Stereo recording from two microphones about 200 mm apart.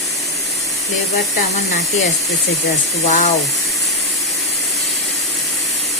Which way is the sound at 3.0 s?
35° left (ahead or behind).